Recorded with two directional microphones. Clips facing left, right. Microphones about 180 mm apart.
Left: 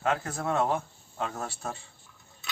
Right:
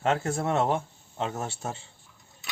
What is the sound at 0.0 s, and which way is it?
Speech, 25° right (ahead or behind).